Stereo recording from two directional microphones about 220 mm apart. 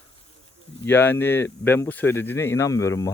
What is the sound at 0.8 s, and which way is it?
Speech, 10° left (ahead or behind).